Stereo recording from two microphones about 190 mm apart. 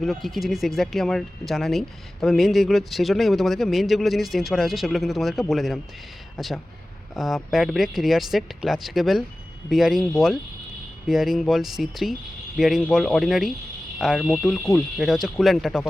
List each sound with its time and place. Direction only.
0.0 s speech: centre (ahead or behind)
11.1 s speech: centre (ahead or behind)
14.6 s speech: 10° left (ahead or behind)
14.9 s speech: centre (ahead or behind)